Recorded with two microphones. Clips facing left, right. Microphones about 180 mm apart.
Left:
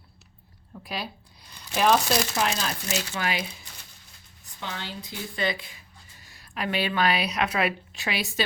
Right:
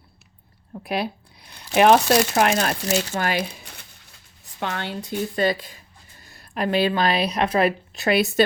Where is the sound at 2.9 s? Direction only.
50° right (ahead or behind).